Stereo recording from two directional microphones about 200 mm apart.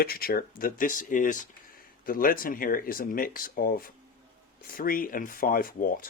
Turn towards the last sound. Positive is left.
turn(degrees=45)  # may be behind; listen again after turning